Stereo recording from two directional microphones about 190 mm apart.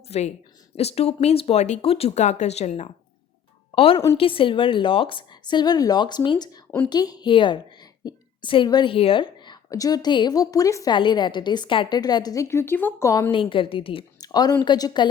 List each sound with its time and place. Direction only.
0.1 s a woman's voice: 35° left (ahead or behind); by 13.3 s 15° left (ahead or behind)
13.3 s a woman's voice: 25° left (ahead or behind)